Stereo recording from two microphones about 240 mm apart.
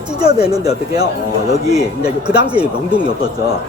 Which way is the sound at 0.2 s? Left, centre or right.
Centre.